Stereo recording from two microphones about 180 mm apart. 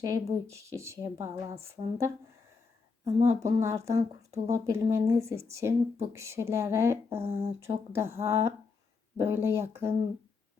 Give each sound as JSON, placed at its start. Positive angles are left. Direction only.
{"t": 0.0, "sound": "speech", "side_deg": -15}
{"t": 3.0, "sound": "speech", "side_deg": -35}
{"t": 3.4, "sound": "speech", "side_deg": -15}
{"t": 4.3, "sound": "speech", "side_deg": -35}
{"t": 4.7, "sound": "speech", "side_deg": -15}